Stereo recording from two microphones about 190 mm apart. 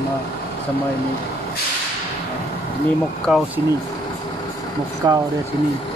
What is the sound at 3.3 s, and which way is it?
Speech, 5° right (ahead or behind).